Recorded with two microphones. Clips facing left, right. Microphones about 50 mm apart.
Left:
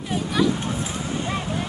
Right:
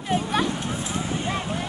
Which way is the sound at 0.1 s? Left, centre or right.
Right.